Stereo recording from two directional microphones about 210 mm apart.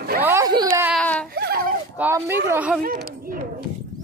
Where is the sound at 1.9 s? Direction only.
10° right (ahead or behind).